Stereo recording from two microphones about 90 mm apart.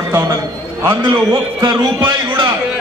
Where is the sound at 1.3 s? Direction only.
55° right (ahead or behind).